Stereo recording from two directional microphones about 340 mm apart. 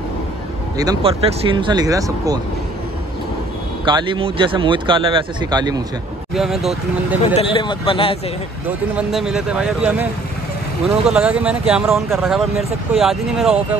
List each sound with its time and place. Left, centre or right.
0.7 s speech: centre
3.8 s speech: centre
6.3 s speech: centre
7.3 s speech: centre
8.6 s speech: centre